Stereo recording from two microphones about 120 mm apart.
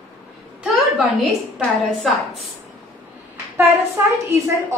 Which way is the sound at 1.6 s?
5° left (ahead or behind).